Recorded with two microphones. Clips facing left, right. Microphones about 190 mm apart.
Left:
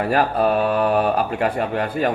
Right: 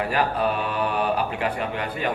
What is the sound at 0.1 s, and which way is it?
Speech, 40° left (ahead or behind).